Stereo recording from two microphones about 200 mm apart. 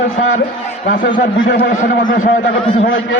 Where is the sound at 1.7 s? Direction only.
40° left (ahead or behind).